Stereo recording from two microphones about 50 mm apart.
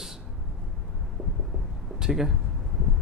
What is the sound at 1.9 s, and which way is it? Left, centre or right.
Speech, centre.